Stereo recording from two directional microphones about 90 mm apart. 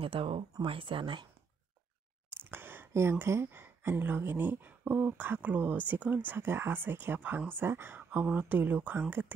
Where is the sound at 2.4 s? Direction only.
25° right (ahead or behind).